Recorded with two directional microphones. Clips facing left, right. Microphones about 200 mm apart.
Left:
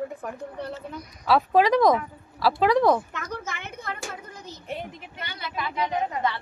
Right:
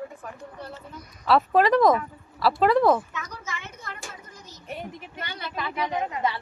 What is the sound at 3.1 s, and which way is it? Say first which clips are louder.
Speech: left 3 dB; 50° left (ahead or behind).